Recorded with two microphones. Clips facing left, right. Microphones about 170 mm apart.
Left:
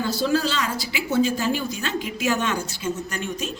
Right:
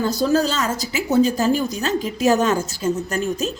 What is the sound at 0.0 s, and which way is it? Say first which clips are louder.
Speech: right 4 dB; 45° right (ahead or behind).